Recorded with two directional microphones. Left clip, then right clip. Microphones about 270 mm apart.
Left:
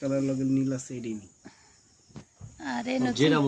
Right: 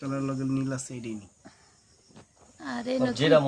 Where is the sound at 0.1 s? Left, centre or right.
Right.